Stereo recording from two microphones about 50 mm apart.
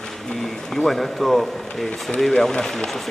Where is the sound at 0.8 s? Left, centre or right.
Centre.